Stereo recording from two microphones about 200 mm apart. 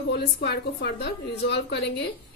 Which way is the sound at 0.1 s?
55° left (ahead or behind).